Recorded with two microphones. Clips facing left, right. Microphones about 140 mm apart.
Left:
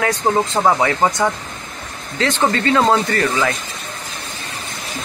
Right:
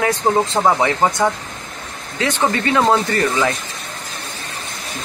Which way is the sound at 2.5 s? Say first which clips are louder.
Even; 15° right (ahead or behind).